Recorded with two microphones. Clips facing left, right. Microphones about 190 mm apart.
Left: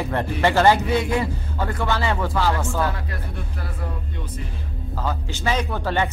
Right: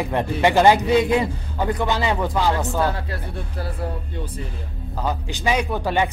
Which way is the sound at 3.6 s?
35° right (ahead or behind).